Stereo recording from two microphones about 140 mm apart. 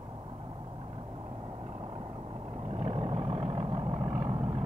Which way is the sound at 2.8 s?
50° right (ahead or behind).